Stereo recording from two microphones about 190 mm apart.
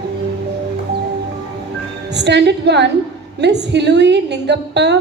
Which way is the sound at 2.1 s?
65° right (ahead or behind).